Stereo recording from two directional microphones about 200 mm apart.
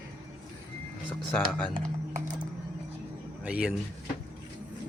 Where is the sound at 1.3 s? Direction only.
5° left (ahead or behind).